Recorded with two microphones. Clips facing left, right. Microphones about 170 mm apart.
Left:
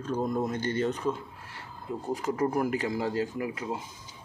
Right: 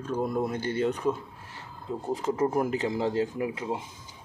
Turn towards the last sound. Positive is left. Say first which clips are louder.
# right 2 dB
turn(degrees=-20)  # may be behind; listen again after turning